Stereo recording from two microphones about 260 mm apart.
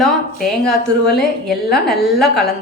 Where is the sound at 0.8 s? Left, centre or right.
Left.